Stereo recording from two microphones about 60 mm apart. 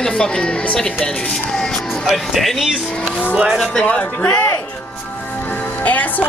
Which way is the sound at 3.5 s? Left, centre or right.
Centre.